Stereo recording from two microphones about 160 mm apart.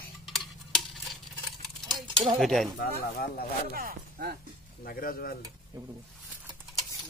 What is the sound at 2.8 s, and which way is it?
Speech, 70° left (ahead or behind).